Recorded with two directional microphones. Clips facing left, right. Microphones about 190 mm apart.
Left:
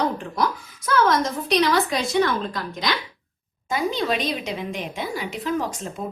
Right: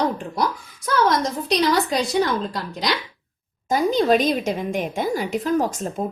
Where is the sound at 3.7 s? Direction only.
40° right (ahead or behind).